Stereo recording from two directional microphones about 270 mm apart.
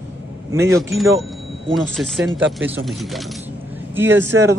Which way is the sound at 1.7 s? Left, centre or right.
Centre.